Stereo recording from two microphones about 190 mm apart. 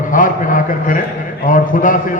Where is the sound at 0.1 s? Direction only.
45° left (ahead or behind).